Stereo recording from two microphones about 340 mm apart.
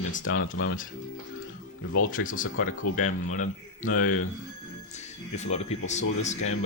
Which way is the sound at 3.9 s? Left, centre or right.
Left.